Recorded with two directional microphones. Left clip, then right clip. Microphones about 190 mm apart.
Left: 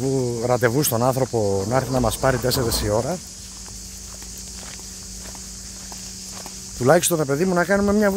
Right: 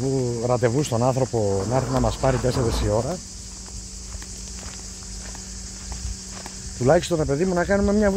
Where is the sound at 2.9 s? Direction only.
20° left (ahead or behind).